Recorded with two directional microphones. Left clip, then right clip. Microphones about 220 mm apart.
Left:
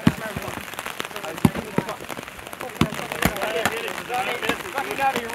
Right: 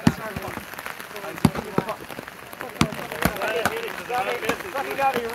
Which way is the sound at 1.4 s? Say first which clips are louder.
Left 1 dB; 50° right (ahead or behind).